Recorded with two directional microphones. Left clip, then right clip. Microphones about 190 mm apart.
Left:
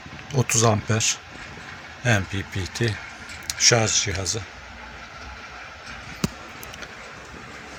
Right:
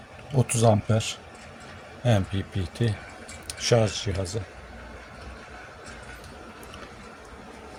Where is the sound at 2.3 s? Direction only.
20° right (ahead or behind).